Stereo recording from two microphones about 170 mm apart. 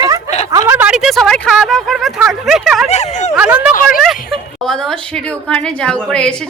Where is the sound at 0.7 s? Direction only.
10° right (ahead or behind).